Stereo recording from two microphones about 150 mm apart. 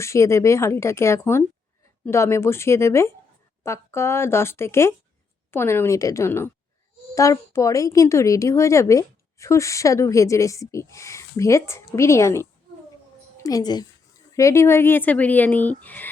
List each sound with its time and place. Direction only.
0.0 s a woman's voice: 20° left (ahead or behind)